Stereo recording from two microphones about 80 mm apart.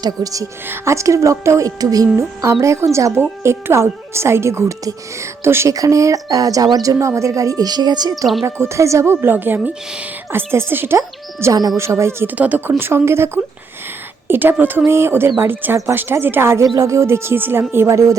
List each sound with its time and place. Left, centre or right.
0.0 s speech: right
0.7 s a woman's voice: right
2.1 s a woman's voice: right
5.7 s speech: right
6.8 s speech: right
8.4 s a woman's voice: right
10.9 s music: right
11.8 s a woman's voice: right
12.3 s a woman's voice: right